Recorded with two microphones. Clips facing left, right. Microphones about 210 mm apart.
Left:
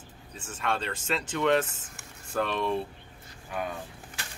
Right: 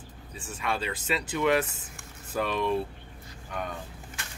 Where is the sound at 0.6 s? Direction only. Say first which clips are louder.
Even; 5° right (ahead or behind).